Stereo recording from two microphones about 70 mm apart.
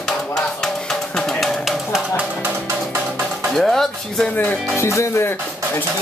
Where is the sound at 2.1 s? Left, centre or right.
Centre.